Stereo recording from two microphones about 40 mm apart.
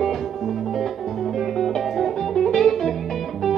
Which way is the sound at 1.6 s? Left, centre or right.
Centre.